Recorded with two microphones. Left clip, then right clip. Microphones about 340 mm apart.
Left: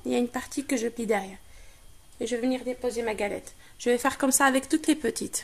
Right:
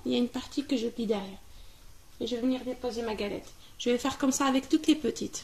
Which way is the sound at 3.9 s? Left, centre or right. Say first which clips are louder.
Left 4 dB; centre.